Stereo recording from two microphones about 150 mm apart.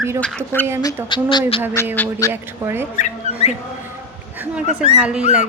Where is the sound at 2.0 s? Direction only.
20° left (ahead or behind).